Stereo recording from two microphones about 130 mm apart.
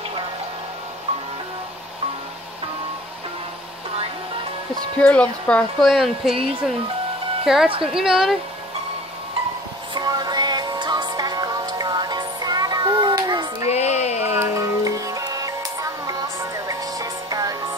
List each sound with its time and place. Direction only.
4.9 s speech: 10° left (ahead or behind)
5.8 s a woman's voice: centre (ahead or behind)
7.4 s a woman's voice: 5° right (ahead or behind)
9.9 s music: 30° right (ahead or behind)
13.7 s music: 60° left (ahead or behind)
14.2 s music: 15° right (ahead or behind)